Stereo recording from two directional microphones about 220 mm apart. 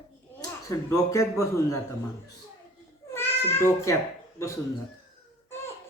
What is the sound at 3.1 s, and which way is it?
Cat, 10° left (ahead or behind).